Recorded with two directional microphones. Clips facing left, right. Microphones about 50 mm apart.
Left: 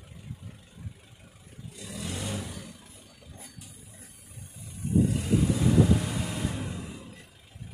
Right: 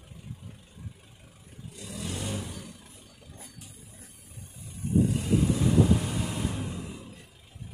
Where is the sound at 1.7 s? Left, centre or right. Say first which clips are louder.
Even; centre.